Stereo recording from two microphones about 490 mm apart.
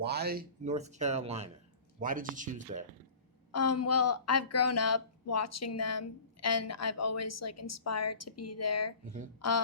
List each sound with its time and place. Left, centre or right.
0.0 s speech: centre
3.5 s speech: left